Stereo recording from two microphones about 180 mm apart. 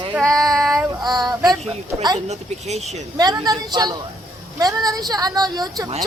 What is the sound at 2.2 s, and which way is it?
Speech, 40° right (ahead or behind).